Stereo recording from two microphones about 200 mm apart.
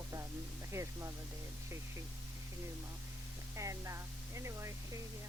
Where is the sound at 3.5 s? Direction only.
15° right (ahead or behind).